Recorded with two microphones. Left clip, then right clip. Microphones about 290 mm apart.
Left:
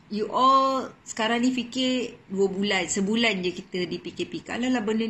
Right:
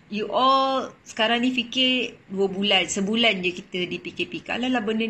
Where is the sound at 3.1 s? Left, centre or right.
Centre.